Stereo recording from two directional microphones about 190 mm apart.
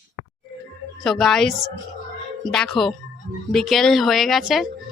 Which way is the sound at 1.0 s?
Centre (ahead or behind).